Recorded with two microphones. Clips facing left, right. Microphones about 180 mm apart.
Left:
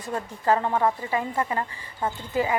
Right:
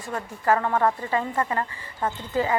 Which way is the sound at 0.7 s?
15° left (ahead or behind).